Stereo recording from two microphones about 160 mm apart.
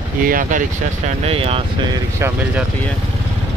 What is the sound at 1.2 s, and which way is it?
Speech, 35° right (ahead or behind).